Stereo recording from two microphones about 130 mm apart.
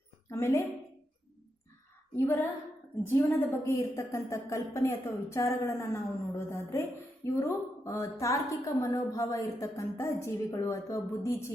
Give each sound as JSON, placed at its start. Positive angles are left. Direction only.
{"t": 0.3, "sound": "a woman's voice", "side_deg": 20}
{"t": 2.1, "sound": "female singing", "side_deg": 20}
{"t": 3.1, "sound": "a woman's voice", "side_deg": 15}